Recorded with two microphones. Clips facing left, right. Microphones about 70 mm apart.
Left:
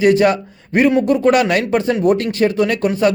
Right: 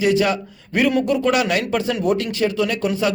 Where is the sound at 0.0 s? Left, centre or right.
Left.